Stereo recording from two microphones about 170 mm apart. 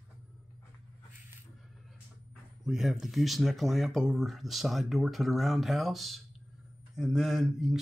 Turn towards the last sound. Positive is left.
turn(degrees=0)  # may be behind; listen again after turning